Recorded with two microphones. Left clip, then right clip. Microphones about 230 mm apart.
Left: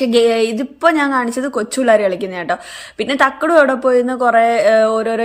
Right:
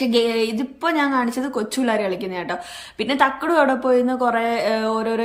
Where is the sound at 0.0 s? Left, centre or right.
Centre.